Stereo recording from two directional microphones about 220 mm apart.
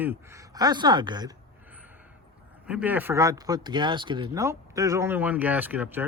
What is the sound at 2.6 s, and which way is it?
Speech, 5° right (ahead or behind).